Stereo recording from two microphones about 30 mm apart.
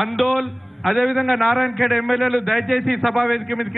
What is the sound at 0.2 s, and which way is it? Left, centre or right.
A man's voice, centre.